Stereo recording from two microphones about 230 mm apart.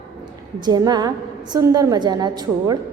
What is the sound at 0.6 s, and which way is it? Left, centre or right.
A woman's voice, centre.